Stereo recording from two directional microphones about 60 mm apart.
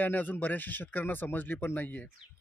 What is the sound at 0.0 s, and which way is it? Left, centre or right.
Speech, left.